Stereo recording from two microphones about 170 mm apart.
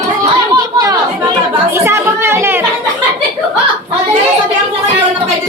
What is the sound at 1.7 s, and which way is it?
Music, 15° right (ahead or behind).